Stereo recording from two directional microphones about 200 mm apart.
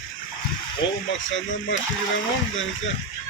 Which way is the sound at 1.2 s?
70° left (ahead or behind).